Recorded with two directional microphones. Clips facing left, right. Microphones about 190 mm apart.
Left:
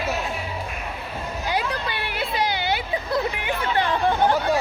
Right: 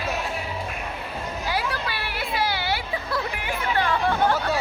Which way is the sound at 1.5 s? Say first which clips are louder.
Left 2 dB; 20° left (ahead or behind).